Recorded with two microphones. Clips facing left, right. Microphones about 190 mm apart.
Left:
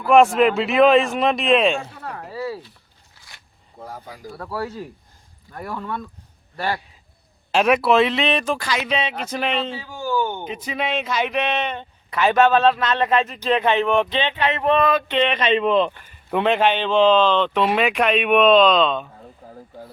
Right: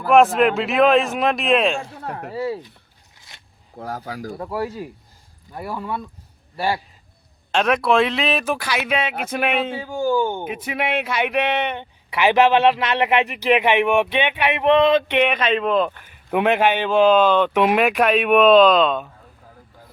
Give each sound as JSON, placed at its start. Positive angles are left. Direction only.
{"t": 0.3, "sound": "speech", "side_deg": 0}
{"t": 2.3, "sound": "speech", "side_deg": -25}
{"t": 3.2, "sound": "a sound", "side_deg": -20}
{"t": 3.8, "sound": "speech", "side_deg": -80}
{"t": 4.4, "sound": "speech", "side_deg": -15}
{"t": 7.5, "sound": "speech", "side_deg": 5}
{"t": 9.7, "sound": "speech", "side_deg": -50}
{"t": 10.2, "sound": "speech", "side_deg": -10}